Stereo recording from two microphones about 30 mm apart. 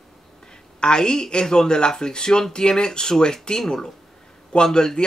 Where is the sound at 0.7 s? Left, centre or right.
Left.